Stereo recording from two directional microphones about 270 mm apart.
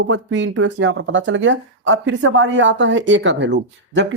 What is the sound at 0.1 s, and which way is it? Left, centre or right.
Speech, right.